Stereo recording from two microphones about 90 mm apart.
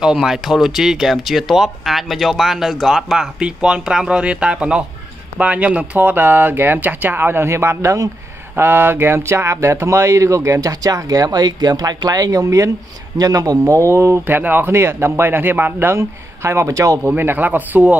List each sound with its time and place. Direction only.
0.0 s speech: 5° right (ahead or behind); by 8.1 s 35° right (ahead or behind)
8.5 s speech: 25° right (ahead or behind)
17.1 s speech: 20° right (ahead or behind)